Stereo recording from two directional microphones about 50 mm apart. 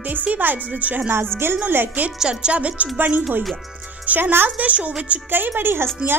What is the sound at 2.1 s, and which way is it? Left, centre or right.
Speech, centre.